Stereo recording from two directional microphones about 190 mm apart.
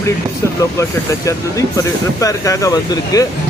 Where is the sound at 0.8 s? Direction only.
15° left (ahead or behind).